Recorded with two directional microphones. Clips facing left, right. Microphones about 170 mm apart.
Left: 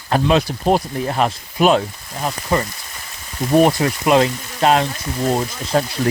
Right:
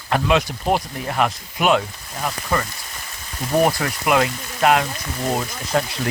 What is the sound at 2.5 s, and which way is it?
Speech, 20° left (ahead or behind).